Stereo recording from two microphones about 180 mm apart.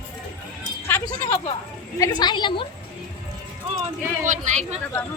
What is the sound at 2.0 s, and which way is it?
Speech, 25° left (ahead or behind).